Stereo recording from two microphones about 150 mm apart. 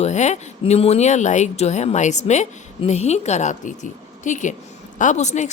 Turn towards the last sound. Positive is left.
turn(degrees=50)  # may be behind; listen again after turning